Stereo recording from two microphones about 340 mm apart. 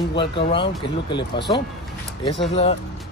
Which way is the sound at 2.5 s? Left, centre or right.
Centre.